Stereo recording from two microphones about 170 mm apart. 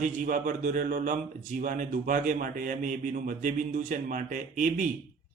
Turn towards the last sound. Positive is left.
turn(degrees=-50)  # may be behind; listen again after turning